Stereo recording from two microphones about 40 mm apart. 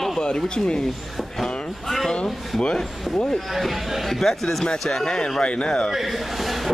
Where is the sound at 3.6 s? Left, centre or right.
Centre; by 5.9 s left.